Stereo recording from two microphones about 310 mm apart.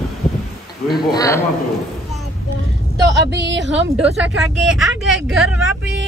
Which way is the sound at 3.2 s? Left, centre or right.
Right.